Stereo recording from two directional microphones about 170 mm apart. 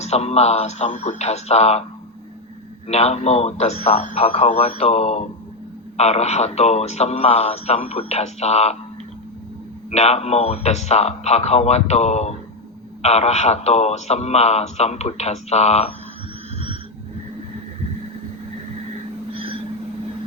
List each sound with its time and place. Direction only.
0.0 s speech: 40° left (ahead or behind)
2.8 s speech: 40° left (ahead or behind)
9.9 s speech: 40° left (ahead or behind)
19.3 s a sound: 30° right (ahead or behind)